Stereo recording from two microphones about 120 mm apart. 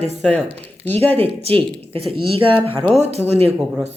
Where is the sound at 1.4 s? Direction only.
55° right (ahead or behind).